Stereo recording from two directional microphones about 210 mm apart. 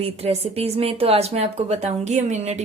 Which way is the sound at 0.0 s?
30° right (ahead or behind).